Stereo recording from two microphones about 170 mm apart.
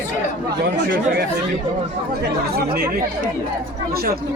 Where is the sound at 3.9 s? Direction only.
65° right (ahead or behind).